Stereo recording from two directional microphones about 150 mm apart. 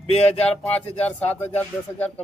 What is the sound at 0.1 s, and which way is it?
Speech, 45° left (ahead or behind).